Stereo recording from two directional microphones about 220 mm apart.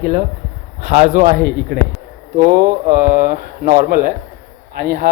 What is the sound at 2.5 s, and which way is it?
A man's voice, 40° right (ahead or behind).